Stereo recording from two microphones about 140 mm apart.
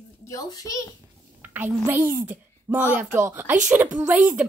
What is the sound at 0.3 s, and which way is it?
Speech, 25° left (ahead or behind).